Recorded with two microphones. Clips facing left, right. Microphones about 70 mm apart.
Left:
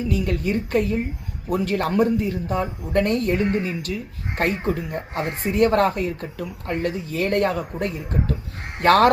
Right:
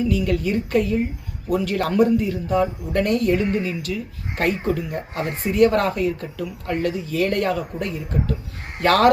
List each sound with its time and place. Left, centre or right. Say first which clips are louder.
0.1 s speech: right 2 dB; left